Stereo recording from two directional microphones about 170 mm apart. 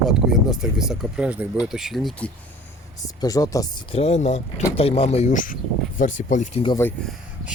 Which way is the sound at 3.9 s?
40° left (ahead or behind).